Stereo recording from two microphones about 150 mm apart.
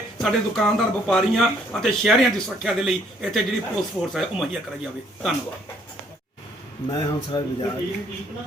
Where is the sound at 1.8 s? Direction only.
Centre (ahead or behind).